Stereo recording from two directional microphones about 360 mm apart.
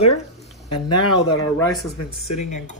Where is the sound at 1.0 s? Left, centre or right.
Left.